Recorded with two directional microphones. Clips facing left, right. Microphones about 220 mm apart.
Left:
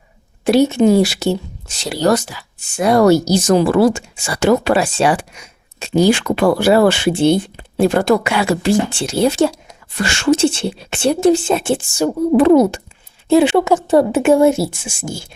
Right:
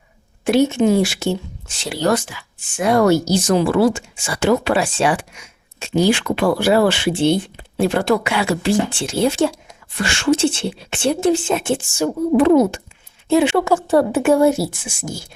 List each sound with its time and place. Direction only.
0.4 s speech: 35° left (ahead or behind)
13.2 s a sound: 35° left (ahead or behind)
13.6 s a woman's voice: 20° left (ahead or behind)